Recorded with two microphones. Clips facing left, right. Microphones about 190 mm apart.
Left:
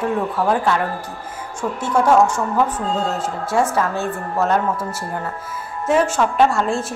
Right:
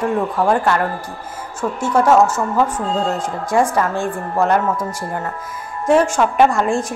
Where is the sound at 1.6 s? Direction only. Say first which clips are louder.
Right 2 dB; 10° right (ahead or behind).